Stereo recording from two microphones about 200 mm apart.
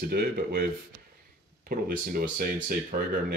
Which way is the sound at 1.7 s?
50° right (ahead or behind).